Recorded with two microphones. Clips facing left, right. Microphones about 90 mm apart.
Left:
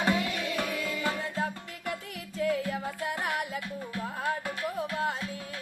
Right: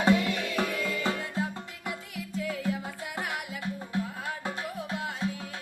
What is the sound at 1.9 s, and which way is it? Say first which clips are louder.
Music: even; 45° left (ahead or behind).